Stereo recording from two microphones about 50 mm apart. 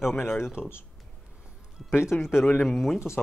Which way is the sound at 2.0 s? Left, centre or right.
Left.